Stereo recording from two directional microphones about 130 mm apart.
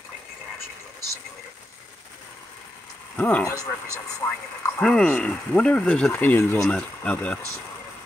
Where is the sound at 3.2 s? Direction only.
10° left (ahead or behind).